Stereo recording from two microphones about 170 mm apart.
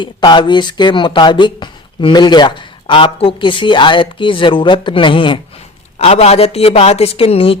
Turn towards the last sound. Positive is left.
turn(degrees=35)  # may be behind; listen again after turning